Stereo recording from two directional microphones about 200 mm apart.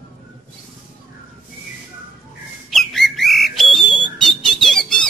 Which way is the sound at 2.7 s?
Centre (ahead or behind).